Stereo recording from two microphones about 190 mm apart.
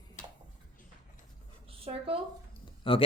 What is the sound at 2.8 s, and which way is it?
Speech, 30° left (ahead or behind).